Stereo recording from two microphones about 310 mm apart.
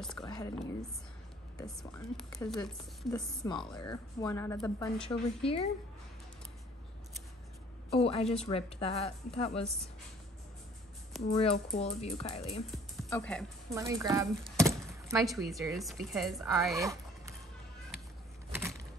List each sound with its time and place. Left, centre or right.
0.2 s speech: centre
1.6 s a woman's voice: centre
3.4 s a woman's voice: centre
5.4 s a woman's voice: centre
7.9 s a woman's voice: centre
11.3 s a woman's voice: centre
12.7 s speech: centre
13.7 s speech: centre
16.5 s a sound: centre
18.5 s a sound: centre